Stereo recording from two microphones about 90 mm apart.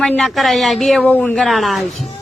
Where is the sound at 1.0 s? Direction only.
15° left (ahead or behind).